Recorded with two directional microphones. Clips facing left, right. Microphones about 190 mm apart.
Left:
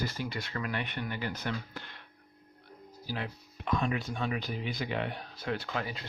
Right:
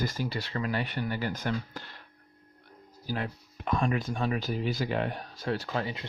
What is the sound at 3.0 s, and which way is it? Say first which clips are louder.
Speech: right 4 dB; 45° right (ahead or behind).